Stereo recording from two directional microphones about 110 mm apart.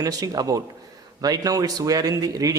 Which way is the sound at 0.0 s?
35° right (ahead or behind).